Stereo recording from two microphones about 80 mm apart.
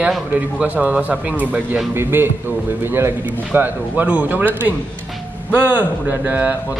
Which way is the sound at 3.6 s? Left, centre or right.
Centre.